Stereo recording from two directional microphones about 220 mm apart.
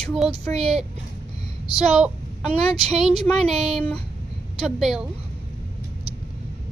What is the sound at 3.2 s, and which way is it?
Speech, centre (ahead or behind).